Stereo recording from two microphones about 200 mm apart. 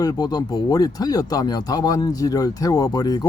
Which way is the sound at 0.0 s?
20° left (ahead or behind).